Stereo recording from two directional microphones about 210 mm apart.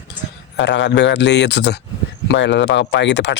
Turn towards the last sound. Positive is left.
turn(degrees=55)  # may be behind; listen again after turning